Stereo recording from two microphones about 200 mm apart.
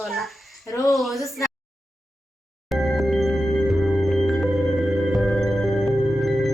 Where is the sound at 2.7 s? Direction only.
Centre (ahead or behind).